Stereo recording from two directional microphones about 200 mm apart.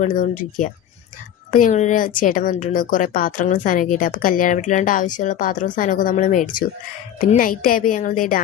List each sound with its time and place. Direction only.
0.0 s a woman's voice: 40° left (ahead or behind)